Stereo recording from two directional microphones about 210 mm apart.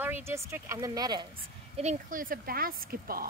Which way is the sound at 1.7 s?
35° right (ahead or behind).